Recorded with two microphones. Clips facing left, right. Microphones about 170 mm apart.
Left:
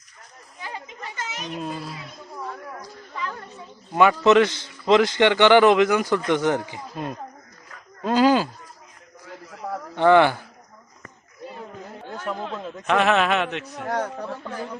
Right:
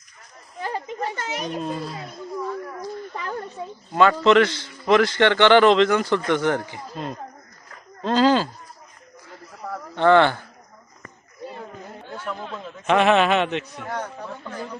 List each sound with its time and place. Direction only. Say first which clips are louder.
0.6 s children playing: right 8 dB; 45° right (ahead or behind)
1.6 s a man's voice: right 3 dB; 5° left (ahead or behind)
3.9 s a man's voice: even; 15° left (ahead or behind)
9.9 s a man's voice: even; 15° left (ahead or behind)
12.8 s a man's voice: right 3 dB; centre (ahead or behind)
13.7 s a man's voice: left 4 dB; 45° left (ahead or behind)